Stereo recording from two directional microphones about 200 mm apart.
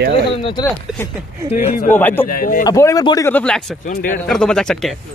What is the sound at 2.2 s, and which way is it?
Speech, 45° left (ahead or behind).